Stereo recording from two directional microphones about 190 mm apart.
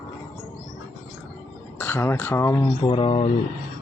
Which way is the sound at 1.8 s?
10° left (ahead or behind).